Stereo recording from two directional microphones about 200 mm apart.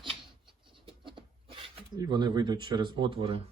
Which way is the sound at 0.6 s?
25° right (ahead or behind).